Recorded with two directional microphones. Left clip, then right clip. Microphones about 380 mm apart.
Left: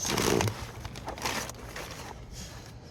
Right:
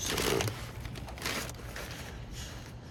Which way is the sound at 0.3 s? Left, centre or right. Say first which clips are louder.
Left 3 dB; centre.